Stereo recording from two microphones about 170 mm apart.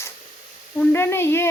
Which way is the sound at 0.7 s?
10° left (ahead or behind).